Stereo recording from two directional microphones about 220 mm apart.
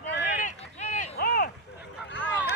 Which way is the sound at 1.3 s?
45° left (ahead or behind).